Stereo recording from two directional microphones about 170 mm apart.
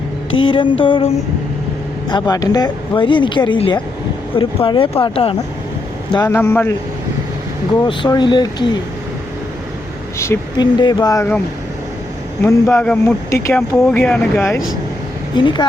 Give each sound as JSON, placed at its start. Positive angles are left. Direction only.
{"t": 0.4, "sound": "speech", "side_deg": 30}
{"t": 6.1, "sound": "speech", "side_deg": 15}
{"t": 7.9, "sound": "speech", "side_deg": 25}
{"t": 10.2, "sound": "speech", "side_deg": 20}
{"t": 12.4, "sound": "speech", "side_deg": 15}
{"t": 15.4, "sound": "speech", "side_deg": 25}